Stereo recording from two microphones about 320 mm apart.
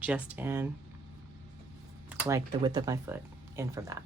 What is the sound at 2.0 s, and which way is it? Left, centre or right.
Speech, centre.